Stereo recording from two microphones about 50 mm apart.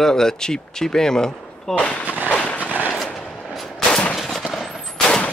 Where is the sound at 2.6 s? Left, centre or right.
Right.